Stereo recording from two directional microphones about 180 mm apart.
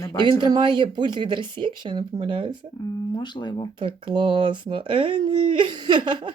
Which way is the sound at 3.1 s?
25° left (ahead or behind).